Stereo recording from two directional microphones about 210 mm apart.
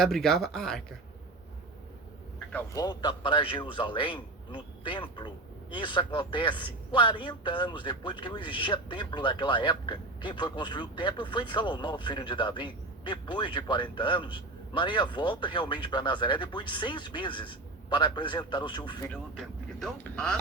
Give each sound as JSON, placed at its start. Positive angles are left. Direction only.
{"t": 0.0, "sound": "speech", "side_deg": 0}
{"t": 2.5, "sound": "a man's voice", "side_deg": 10}
{"t": 2.8, "sound": "a man's voice", "side_deg": 20}
{"t": 19.4, "sound": "speech", "side_deg": 5}